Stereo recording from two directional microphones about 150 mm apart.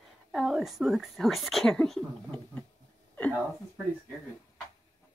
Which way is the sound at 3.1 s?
10° left (ahead or behind).